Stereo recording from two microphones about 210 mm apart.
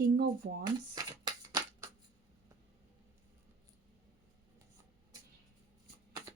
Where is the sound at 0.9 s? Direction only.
20° right (ahead or behind).